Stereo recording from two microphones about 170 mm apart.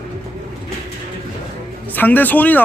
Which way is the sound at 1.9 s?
10° left (ahead or behind).